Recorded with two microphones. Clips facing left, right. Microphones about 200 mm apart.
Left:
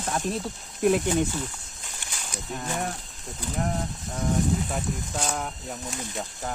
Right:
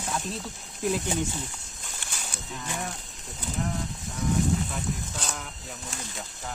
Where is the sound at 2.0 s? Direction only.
15° left (ahead or behind).